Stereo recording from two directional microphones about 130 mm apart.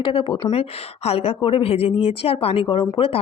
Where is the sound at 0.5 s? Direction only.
50° left (ahead or behind).